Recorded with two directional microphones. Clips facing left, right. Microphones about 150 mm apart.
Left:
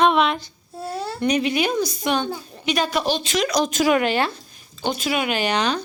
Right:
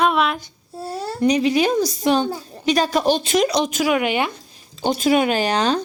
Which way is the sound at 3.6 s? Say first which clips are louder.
Left 1 dB; 10° right (ahead or behind).